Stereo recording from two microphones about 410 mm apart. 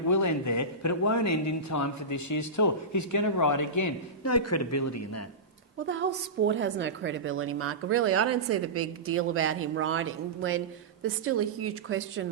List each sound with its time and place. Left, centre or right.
0.1 s speech: left
5.8 s a woman's voice: right